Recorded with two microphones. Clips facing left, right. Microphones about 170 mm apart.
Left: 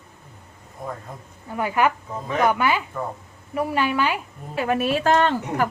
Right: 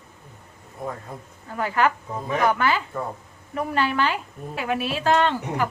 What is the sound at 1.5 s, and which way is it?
A woman's voice, 15° left (ahead or behind).